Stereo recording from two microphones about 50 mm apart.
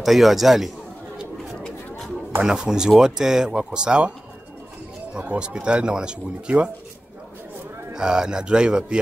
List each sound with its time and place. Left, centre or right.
0.0 s a man's voice: centre
2.4 s speech: centre
5.2 s speech: right
7.9 s speech: centre